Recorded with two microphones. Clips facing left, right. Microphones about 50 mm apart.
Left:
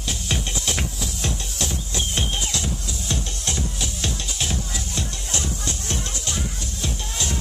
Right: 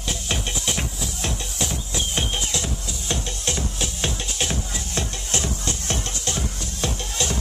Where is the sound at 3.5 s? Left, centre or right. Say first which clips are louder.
Right 1 dB; right.